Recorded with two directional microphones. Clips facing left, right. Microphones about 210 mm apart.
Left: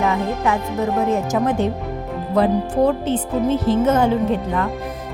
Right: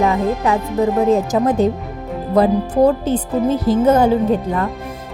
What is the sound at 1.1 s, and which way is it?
A woman's voice, 35° right (ahead or behind).